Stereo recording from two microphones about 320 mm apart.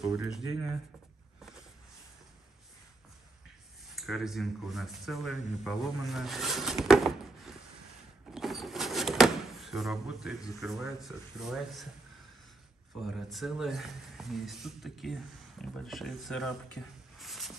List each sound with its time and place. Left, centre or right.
0.0 s speech: centre
3.9 s speech: centre
13.0 s speech: centre
17.2 s a sound: centre